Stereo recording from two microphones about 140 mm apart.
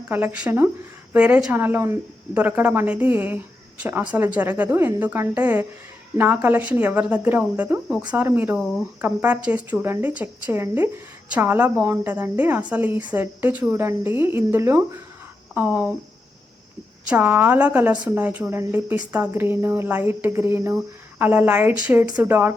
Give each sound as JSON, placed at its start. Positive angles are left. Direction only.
{"t": 0.1, "sound": "a woman's voice", "side_deg": -15}
{"t": 17.1, "sound": "a woman's voice", "side_deg": -10}